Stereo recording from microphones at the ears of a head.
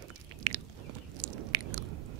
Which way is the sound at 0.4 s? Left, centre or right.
Right.